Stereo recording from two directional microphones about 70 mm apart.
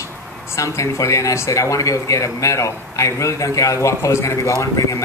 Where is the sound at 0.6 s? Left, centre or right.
Left.